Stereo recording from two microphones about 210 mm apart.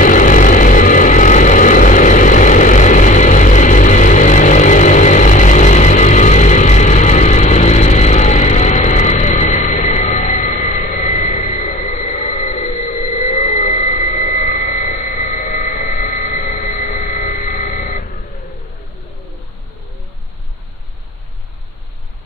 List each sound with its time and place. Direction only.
0.0 s vehicle: 40° left (ahead or behind)